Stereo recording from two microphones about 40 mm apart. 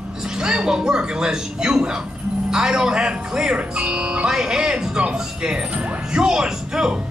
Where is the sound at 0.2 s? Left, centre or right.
Centre.